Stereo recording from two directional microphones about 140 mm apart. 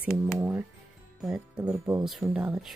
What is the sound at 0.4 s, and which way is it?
Music, 15° right (ahead or behind).